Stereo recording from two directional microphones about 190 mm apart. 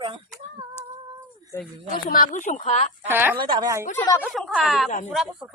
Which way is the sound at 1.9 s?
50° left (ahead or behind).